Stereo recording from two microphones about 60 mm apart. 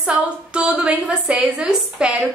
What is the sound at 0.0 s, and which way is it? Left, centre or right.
A woman's voice, centre.